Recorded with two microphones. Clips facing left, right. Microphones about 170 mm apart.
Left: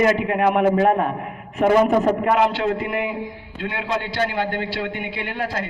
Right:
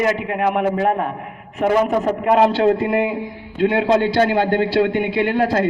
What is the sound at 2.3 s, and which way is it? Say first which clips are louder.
A man's voice: right 5 dB; 35° right (ahead or behind).